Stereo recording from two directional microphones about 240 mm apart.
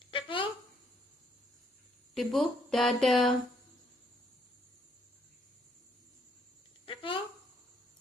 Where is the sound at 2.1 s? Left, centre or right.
Centre.